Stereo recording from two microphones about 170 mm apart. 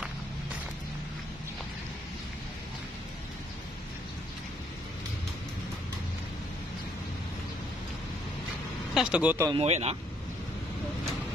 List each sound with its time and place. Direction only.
8.9 s speech: 5° right (ahead or behind)
9.5 s speech: 40° right (ahead or behind)